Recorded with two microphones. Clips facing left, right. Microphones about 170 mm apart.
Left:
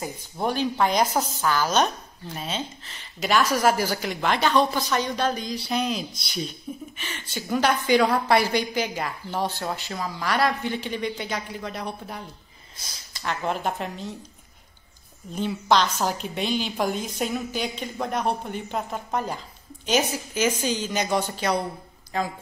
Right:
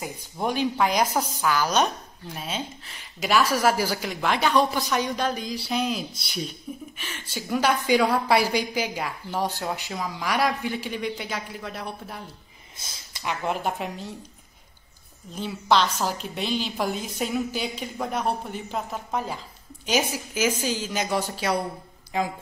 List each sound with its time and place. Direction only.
0.0 s a woman's voice: 10° right (ahead or behind)
12.7 s a sound: 25° right (ahead or behind)
13.2 s speech: 10° right (ahead or behind)
15.3 s a woman's voice: centre (ahead or behind)